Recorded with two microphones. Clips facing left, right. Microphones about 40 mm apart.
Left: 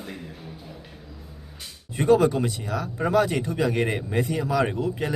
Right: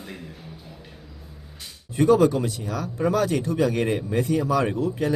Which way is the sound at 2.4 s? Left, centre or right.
Centre.